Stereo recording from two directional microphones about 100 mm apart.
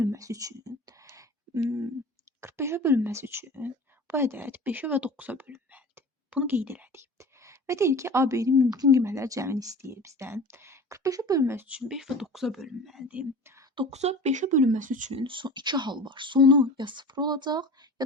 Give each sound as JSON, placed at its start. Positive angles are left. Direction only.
{"t": 0.0, "sound": "a sound", "side_deg": -30}
{"t": 2.4, "sound": "a woman's voice", "side_deg": -25}
{"t": 11.8, "sound": "speech", "side_deg": -5}
{"t": 13.9, "sound": "speech", "side_deg": -90}
{"t": 15.1, "sound": "speech", "side_deg": -55}